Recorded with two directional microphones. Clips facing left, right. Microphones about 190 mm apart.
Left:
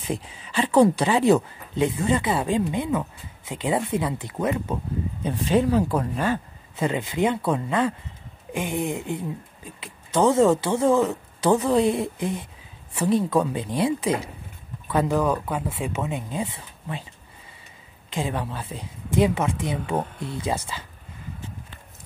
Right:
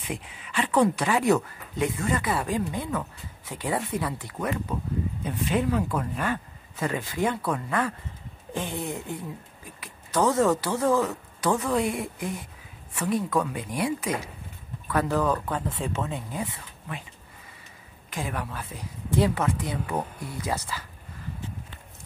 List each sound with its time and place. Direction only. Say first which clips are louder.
0.0 s speech: left 5 dB; 30° left (ahead or behind)
18.1 s speech: left 4 dB; 25° left (ahead or behind)